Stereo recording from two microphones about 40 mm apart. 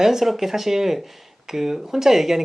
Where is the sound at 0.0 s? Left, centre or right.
Centre.